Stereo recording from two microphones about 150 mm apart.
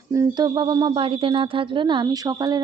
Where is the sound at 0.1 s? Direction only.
25° right (ahead or behind).